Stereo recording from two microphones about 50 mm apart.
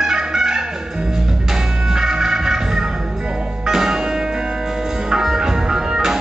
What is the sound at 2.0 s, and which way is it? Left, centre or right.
Music, centre.